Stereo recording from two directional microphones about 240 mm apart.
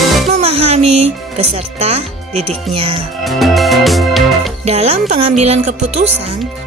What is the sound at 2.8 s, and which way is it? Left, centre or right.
Speech, right.